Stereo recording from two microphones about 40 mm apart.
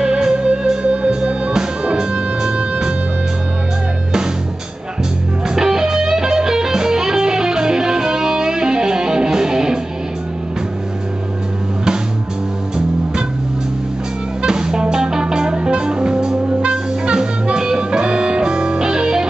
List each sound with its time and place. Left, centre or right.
0.0 s music: centre
5.5 s music: centre
14.4 s music: centre